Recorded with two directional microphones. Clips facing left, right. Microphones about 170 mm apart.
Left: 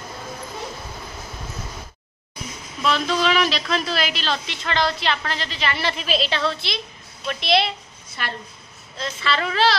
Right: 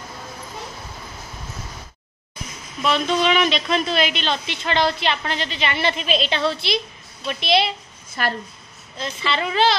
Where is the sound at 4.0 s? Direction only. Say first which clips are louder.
Right 3 dB; centre (ahead or behind).